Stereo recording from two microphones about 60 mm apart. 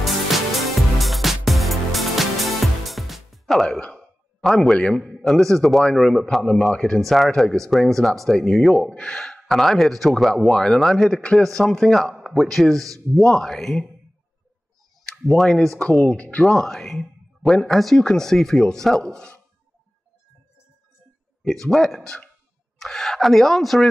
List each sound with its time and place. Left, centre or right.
0.0 s music: centre
3.6 s a sound: centre
5.2 s speech: centre
8.9 s gasp: centre
9.5 s speech: centre
15.0 s speech: centre; by 16.4 s left
16.4 s speech: centre
21.5 s speech: centre